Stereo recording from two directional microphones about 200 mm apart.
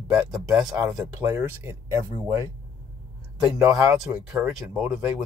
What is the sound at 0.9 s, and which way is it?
Speech, 15° right (ahead or behind).